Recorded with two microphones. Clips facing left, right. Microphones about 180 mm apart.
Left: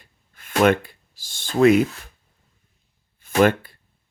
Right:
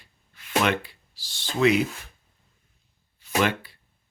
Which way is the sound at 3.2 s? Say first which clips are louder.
Left 7 dB; 50° left (ahead or behind).